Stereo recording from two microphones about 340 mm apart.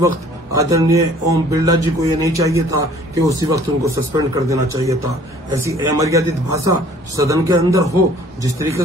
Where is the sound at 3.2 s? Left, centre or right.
Centre.